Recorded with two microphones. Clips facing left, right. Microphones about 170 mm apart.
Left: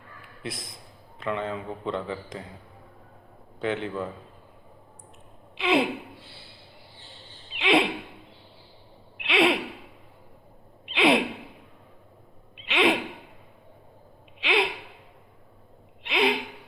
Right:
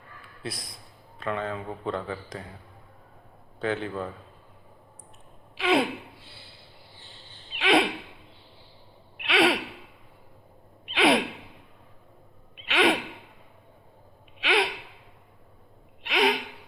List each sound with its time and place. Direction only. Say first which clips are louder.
0.4 s a man's voice: left 1 dB; 25° left (ahead or behind)
3.6 s a man's voice: even; 20° left (ahead or behind)
5.5 s gasp: even; 25° left (ahead or behind)
7.6 s owl: even; 25° left (ahead or behind)
9.2 s gasp: even; 25° left (ahead or behind)
10.9 s gasp: left 1 dB; 25° left (ahead or behind)
12.6 s gasp: even; 25° left (ahead or behind)
14.4 s gasp: even; 25° left (ahead or behind)
16.0 s gasp: even; 25° left (ahead or behind)